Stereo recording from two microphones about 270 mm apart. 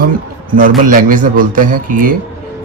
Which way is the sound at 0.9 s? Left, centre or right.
Right.